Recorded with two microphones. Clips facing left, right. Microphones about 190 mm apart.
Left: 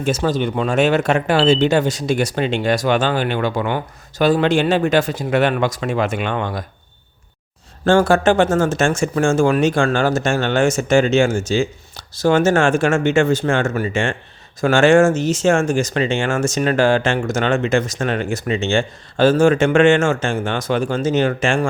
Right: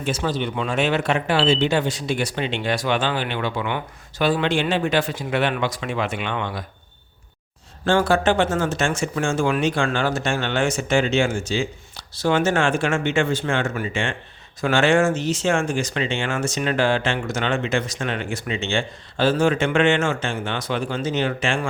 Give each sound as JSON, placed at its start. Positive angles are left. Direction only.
{"t": 0.0, "sound": "speech", "side_deg": 45}
{"t": 7.9, "sound": "speech", "side_deg": 45}